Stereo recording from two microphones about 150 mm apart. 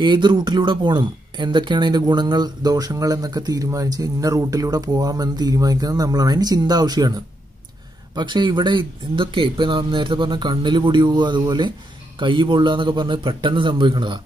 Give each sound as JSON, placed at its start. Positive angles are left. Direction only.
{"t": 0.0, "sound": "speech", "side_deg": -30}